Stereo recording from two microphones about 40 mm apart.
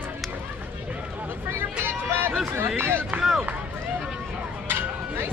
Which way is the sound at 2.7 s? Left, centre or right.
Right.